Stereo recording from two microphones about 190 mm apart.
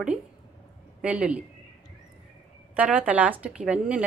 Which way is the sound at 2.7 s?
5° right (ahead or behind).